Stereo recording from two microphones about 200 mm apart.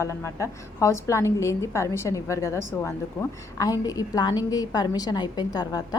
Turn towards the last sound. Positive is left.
turn(degrees=20)  # may be behind; listen again after turning